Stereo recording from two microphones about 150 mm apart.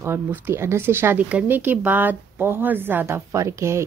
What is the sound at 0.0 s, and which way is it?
Speech, 15° right (ahead or behind).